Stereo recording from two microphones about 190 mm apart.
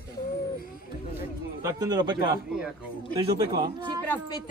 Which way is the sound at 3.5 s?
20° right (ahead or behind).